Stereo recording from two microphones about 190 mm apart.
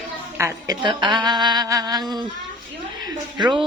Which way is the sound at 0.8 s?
25° right (ahead or behind).